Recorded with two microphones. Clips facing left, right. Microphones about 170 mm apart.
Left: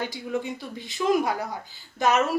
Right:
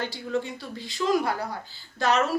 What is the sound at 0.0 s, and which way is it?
A woman's voice, 15° left (ahead or behind).